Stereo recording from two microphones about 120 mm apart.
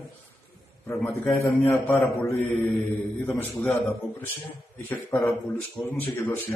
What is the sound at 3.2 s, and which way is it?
Speech, 15° left (ahead or behind).